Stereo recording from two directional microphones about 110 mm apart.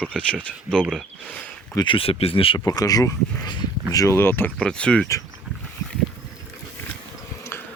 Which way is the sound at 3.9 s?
30° left (ahead or behind).